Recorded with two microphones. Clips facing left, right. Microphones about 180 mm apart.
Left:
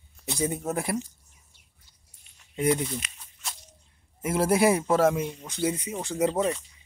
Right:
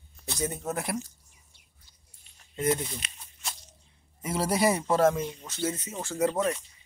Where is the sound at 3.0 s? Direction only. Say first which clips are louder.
Even; 30° right (ahead or behind).